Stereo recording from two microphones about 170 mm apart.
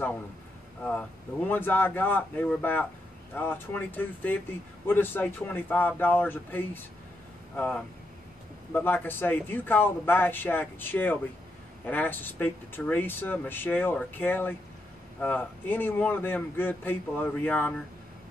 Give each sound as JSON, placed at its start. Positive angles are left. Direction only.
{"t": 0.8, "sound": "speech", "side_deg": 10}